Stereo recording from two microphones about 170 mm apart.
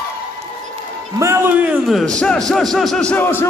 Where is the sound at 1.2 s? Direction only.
15° right (ahead or behind).